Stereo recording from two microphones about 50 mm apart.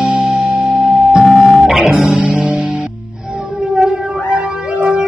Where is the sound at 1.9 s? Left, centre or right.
Right.